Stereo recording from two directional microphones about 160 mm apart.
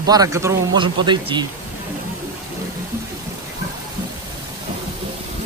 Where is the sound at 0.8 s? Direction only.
30° right (ahead or behind).